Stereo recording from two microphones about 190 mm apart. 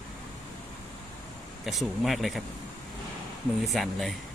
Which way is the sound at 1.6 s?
Centre (ahead or behind).